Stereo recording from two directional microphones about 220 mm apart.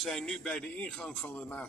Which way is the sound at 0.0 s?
5° left (ahead or behind).